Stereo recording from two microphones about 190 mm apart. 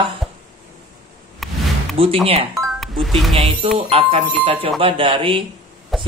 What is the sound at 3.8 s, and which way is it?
Speech, 30° right (ahead or behind).